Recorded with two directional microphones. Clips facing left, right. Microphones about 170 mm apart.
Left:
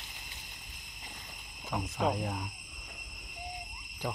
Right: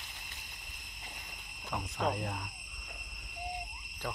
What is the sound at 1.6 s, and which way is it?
Speech, 5° left (ahead or behind).